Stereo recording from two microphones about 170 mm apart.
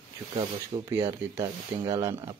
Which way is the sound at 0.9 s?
20° right (ahead or behind).